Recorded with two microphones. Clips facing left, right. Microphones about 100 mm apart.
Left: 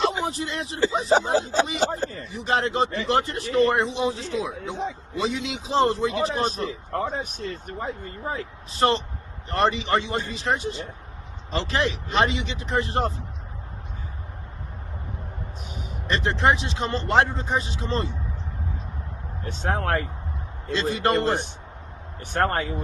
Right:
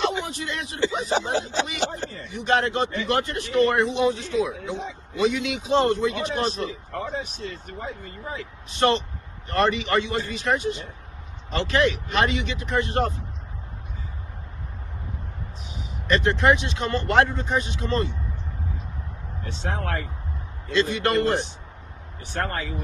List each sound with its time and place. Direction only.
0.1 s speech: 35° left (ahead or behind)
9.6 s speech: 25° left (ahead or behind)
16.0 s speech: 25° left (ahead or behind)
19.5 s speech: 45° left (ahead or behind)
20.7 s speech: 35° left (ahead or behind)
22.2 s speech: 45° left (ahead or behind)